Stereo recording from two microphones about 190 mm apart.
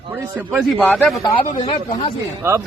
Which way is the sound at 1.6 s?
30° left (ahead or behind).